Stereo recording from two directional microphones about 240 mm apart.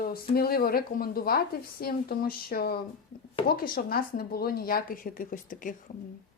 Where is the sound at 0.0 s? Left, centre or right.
Left.